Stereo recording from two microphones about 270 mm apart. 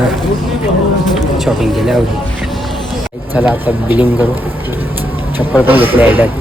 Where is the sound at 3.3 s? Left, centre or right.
Centre.